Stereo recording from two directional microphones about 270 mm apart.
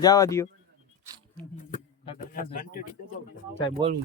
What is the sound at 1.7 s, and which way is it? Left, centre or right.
Speech, left.